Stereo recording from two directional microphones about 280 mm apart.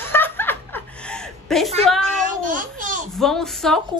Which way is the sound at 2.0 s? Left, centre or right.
Right.